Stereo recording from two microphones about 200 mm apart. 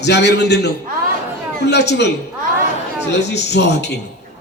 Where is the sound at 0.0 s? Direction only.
60° left (ahead or behind).